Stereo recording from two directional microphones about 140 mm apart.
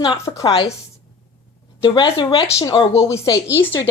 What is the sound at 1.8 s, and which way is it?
Speech, 30° left (ahead or behind).